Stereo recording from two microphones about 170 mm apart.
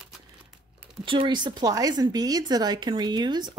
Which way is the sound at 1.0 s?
30° right (ahead or behind).